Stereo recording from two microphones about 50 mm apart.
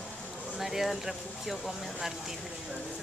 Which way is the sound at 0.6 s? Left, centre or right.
Centre.